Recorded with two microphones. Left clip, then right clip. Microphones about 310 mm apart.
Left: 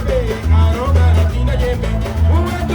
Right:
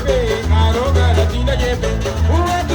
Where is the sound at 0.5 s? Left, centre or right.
Right.